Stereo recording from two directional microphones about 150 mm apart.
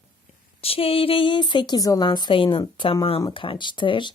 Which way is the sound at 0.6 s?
40° left (ahead or behind).